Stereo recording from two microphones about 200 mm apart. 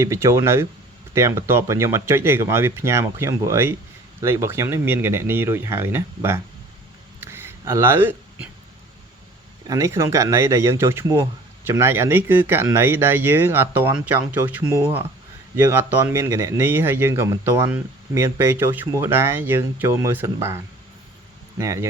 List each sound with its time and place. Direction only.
0.0 s speech: 15° right (ahead or behind)
7.2 s a sound: 10° right (ahead or behind)
9.6 s speech: 15° right (ahead or behind)
21.6 s speech: 15° right (ahead or behind)